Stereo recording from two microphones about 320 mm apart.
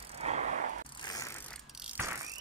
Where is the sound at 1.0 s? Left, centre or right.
Centre.